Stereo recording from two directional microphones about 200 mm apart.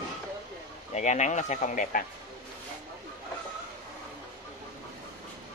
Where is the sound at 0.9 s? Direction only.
35° left (ahead or behind).